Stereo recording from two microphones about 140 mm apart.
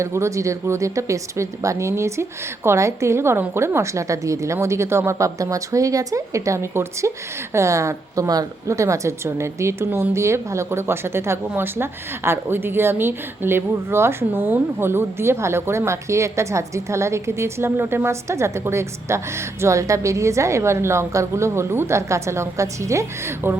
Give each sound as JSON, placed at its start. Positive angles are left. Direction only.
{"t": 0.0, "sound": "a woman's voice", "side_deg": -20}